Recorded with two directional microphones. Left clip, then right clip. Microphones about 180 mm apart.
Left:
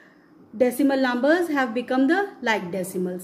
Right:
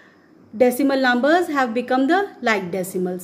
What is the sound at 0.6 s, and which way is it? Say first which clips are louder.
A woman's voice: right 4 dB; 25° right (ahead or behind).